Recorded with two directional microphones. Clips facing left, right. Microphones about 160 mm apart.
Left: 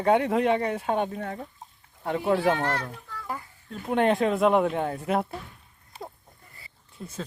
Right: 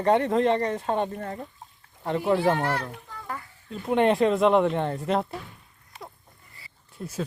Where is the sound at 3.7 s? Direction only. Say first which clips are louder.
Right 2 dB; centre (ahead or behind).